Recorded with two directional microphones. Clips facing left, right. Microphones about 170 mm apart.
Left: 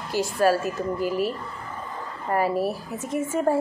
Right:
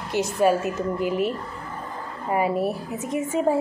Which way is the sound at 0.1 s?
20° right (ahead or behind).